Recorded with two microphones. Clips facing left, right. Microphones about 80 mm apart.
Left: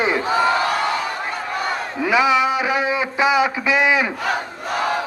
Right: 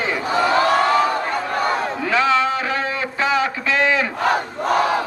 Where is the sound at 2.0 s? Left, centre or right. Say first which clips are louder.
Left 3 dB; centre.